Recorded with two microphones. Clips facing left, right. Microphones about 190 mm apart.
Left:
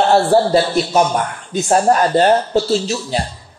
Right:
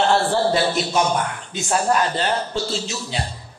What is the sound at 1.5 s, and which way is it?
A man's voice, 45° left (ahead or behind).